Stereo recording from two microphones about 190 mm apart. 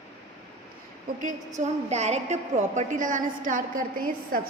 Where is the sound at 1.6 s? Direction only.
35° right (ahead or behind).